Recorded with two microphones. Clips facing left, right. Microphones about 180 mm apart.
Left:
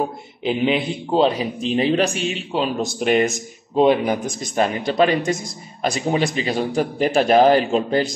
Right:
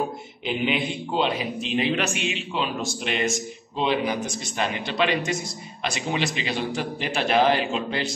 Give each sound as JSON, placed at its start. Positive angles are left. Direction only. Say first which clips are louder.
{"t": 0.4, "sound": "a man's voice", "louder": "left 6 dB", "side_deg": 35}